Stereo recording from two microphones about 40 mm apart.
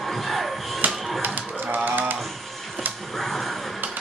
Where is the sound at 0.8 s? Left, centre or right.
Right.